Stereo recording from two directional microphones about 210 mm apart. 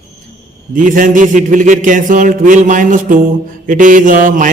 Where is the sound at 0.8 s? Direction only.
40° right (ahead or behind).